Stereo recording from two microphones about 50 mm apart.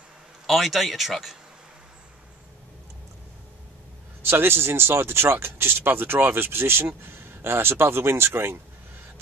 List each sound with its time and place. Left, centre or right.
0.5 s speech: centre
4.3 s speech: right